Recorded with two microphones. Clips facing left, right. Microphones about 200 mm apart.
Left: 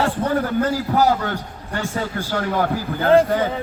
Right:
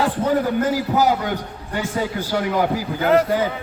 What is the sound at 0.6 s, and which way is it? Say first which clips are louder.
A man's voice: even; 10° right (ahead or behind).